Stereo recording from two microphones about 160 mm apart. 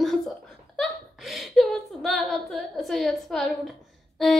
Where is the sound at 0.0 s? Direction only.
Centre (ahead or behind).